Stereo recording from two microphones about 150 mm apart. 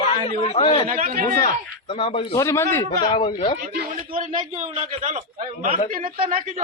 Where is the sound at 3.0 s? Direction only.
35° left (ahead or behind).